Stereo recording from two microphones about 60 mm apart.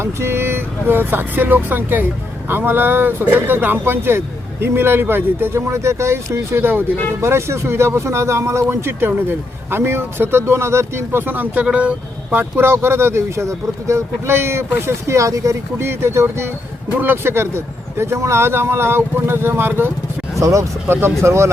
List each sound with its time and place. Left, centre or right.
0.0 s speech: right
11.6 s speech: right
12.4 s speech: right
15.8 s speech: right
20.4 s speech: right
20.8 s speech: right